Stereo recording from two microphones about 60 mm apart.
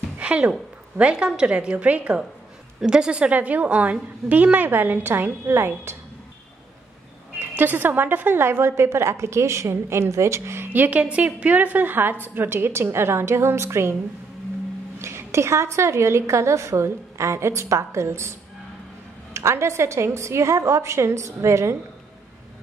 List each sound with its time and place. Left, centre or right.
0.2 s a woman's voice: right
7.3 s a woman's voice: right
10.7 s a woman's voice: right
15.0 s a woman's voice: right
19.3 s a woman's voice: right